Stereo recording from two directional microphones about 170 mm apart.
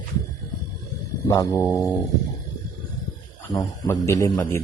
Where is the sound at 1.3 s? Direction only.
20° left (ahead or behind).